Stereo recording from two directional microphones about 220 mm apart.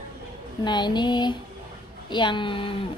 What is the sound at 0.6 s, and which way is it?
A woman's voice, 20° left (ahead or behind).